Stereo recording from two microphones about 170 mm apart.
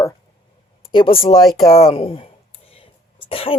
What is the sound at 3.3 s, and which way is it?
Speech, 35° left (ahead or behind).